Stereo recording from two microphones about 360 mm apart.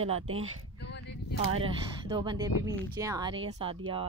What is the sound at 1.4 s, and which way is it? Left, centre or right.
Speech, centre.